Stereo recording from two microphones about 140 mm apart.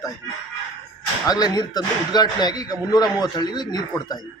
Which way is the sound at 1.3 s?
30° left (ahead or behind).